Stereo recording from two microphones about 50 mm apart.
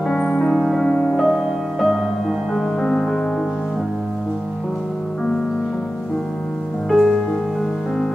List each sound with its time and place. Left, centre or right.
0.1 s music: centre
0.6 s music: centre
0.8 s music: centre
1.1 s music: centre
6.9 s music: centre